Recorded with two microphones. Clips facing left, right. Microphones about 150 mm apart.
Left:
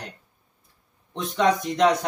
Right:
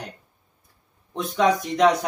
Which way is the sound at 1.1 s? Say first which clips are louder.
Right 1 dB; centre (ahead or behind).